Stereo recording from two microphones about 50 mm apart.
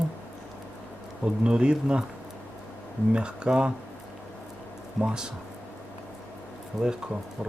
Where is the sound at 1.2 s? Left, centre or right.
Centre.